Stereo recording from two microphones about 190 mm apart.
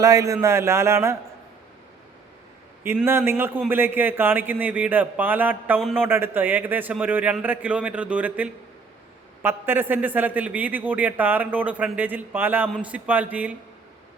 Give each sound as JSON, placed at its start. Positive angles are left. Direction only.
{"t": 0.0, "sound": "a man's voice", "side_deg": -15}
{"t": 2.8, "sound": "a man's voice", "side_deg": -10}